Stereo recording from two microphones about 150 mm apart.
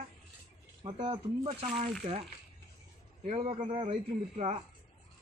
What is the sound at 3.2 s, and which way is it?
A man's voice, 45° right (ahead or behind).